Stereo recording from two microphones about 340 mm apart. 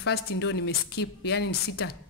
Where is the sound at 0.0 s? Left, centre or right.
Left.